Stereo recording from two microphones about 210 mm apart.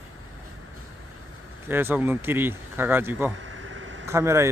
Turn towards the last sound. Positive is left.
turn(degrees=-15)  # may be behind; listen again after turning